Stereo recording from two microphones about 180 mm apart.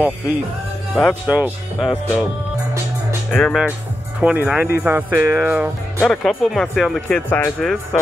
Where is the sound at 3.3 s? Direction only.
5° left (ahead or behind).